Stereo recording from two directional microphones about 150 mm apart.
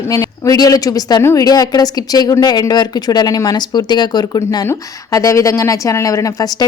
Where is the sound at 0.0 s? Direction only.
20° left (ahead or behind).